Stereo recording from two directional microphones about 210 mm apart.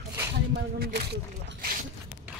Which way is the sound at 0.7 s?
50° right (ahead or behind).